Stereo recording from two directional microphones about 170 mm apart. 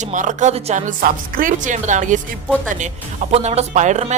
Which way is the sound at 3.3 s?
40° right (ahead or behind).